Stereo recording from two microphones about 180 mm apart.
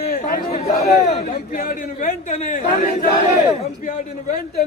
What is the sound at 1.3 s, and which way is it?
A man's voice, 50° left (ahead or behind).